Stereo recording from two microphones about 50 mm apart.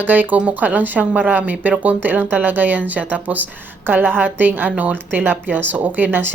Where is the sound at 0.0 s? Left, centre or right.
Right.